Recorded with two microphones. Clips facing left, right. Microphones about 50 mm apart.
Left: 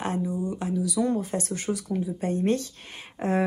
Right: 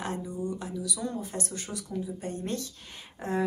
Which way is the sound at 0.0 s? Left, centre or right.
Left.